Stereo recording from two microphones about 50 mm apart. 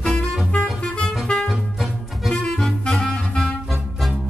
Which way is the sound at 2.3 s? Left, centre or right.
Centre.